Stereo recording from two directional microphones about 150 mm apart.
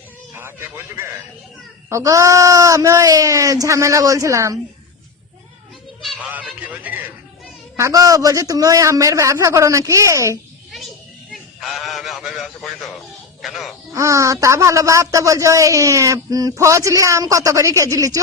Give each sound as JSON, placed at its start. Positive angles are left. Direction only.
{"t": 1.9, "sound": "speech", "side_deg": -20}
{"t": 6.0, "sound": "a sound", "side_deg": 0}
{"t": 6.3, "sound": "a man's voice", "side_deg": -10}
{"t": 11.6, "sound": "speech", "side_deg": 0}
{"t": 13.9, "sound": "speech", "side_deg": -20}